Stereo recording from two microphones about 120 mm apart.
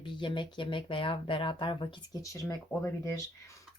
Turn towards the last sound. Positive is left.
turn(degrees=25)  # may be behind; listen again after turning